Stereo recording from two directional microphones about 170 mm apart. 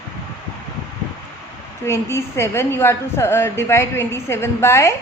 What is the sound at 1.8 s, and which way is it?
A woman's voice, 15° left (ahead or behind).